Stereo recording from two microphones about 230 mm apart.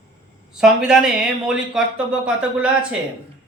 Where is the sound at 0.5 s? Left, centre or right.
Centre.